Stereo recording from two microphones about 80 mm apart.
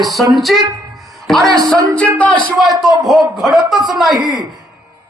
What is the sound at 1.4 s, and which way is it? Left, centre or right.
Speech, right.